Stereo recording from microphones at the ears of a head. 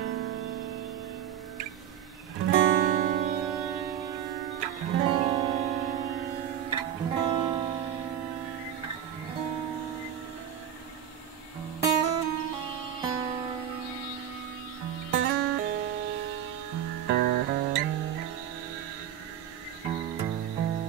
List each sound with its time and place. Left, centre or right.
0.0 s music: right
2.3 s music: right
11.8 s music: right
14.9 s music: right
19.8 s music: right